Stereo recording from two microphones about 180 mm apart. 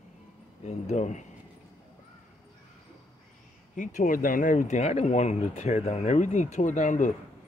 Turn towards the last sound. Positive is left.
turn(degrees=45)  # may be behind; listen again after turning